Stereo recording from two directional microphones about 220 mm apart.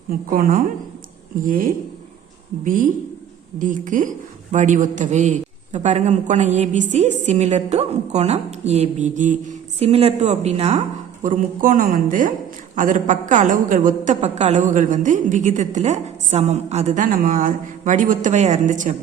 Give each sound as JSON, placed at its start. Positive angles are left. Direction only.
{"t": 0.1, "sound": "a woman's voice", "side_deg": -40}